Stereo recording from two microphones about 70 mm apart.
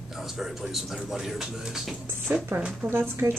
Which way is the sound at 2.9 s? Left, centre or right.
Right.